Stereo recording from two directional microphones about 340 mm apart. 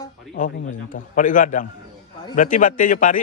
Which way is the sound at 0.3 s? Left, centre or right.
Left.